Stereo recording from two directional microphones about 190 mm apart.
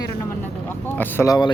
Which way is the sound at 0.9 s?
10° left (ahead or behind).